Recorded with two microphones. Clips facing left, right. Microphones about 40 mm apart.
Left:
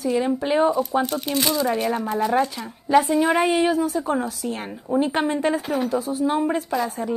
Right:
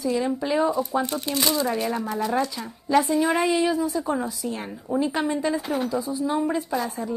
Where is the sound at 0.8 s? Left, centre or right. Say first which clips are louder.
Left 3 dB; left.